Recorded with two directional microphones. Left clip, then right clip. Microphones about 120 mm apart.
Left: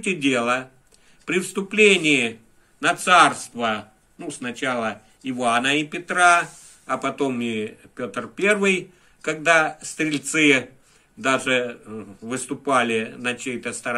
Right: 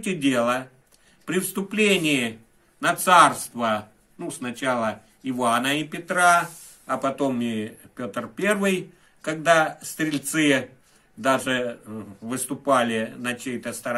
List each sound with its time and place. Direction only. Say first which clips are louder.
0.0 s speech: left 1 dB; 45° right (ahead or behind)
2.8 s a man's voice: left 1 dB; 55° right (ahead or behind); by 13.9 s 35° right (ahead or behind)